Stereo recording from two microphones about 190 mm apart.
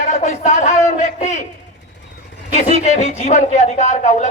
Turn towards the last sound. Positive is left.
turn(degrees=40)  # may be behind; listen again after turning